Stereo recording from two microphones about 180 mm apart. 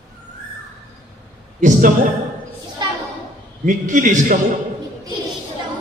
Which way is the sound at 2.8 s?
25° right (ahead or behind).